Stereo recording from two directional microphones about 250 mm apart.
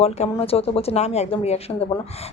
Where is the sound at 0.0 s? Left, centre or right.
Left.